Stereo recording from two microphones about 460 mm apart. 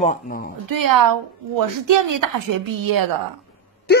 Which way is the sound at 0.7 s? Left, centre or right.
Right.